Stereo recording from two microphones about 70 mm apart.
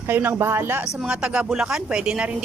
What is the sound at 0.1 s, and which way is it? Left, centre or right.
Speech, right.